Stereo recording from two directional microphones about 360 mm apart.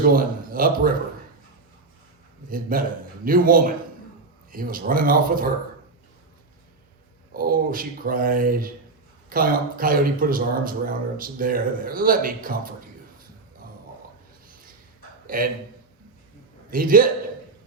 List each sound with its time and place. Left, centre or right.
0.0 s a man's voice: right
2.5 s a man's voice: right
7.3 s a man's voice: right
15.3 s a man's voice: right
16.6 s a man's voice: right